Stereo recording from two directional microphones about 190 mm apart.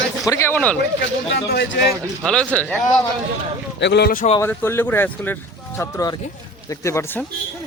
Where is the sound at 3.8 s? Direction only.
65° left (ahead or behind).